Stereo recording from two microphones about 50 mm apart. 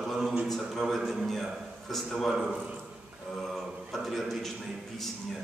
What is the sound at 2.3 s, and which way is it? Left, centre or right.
Speech, centre.